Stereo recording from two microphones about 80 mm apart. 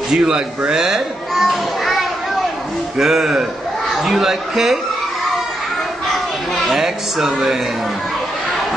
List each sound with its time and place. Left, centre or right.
0.1 s a man's voice: centre
0.7 s children playing: centre
3.0 s a man's voice: centre
6.0 s a sound: centre